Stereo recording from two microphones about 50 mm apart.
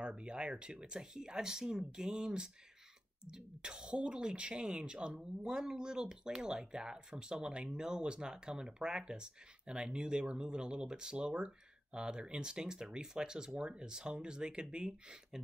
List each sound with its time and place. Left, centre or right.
0.0 s speech: centre